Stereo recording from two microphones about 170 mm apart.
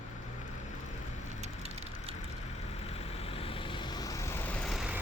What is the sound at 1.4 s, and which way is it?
Vehicle, 35° right (ahead or behind).